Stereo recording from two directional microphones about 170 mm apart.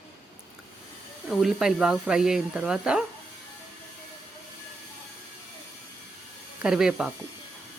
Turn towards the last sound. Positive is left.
turn(degrees=-5)  # may be behind; listen again after turning